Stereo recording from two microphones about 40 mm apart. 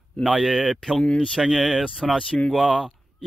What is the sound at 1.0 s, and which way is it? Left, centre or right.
Speech, left.